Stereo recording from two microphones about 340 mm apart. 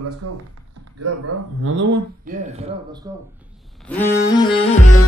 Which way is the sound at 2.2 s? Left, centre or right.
Right.